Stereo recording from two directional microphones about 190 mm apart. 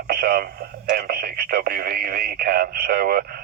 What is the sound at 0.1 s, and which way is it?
Speech, 50° right (ahead or behind).